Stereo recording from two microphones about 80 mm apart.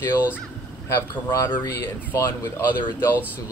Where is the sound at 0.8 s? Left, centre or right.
Left.